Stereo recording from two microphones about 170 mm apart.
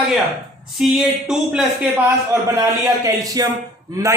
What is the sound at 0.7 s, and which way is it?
Speech, 5° right (ahead or behind).